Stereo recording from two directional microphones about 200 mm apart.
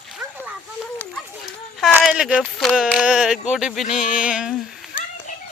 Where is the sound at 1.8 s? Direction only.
5° right (ahead or behind).